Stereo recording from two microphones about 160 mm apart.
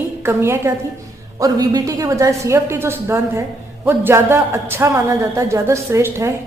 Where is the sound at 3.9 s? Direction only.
15° right (ahead or behind).